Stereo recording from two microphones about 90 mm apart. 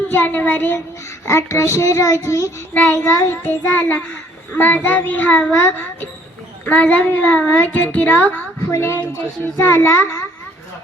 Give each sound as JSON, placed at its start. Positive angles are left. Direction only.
{"t": 0.1, "sound": "a child's voice", "side_deg": 20}
{"t": 1.2, "sound": "child singing", "side_deg": 30}
{"t": 3.4, "sound": "a child's voice", "side_deg": 20}
{"t": 9.6, "sound": "child singing", "side_deg": 30}